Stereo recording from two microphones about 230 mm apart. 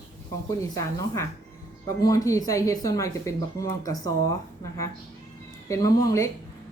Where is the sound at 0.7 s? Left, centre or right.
Centre.